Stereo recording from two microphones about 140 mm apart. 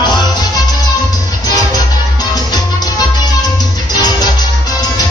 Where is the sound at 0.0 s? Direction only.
30° left (ahead or behind).